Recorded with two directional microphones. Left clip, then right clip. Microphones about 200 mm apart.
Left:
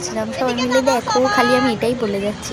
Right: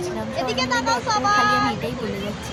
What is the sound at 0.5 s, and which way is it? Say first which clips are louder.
Speech: left 4 dB; 10° right (ahead or behind).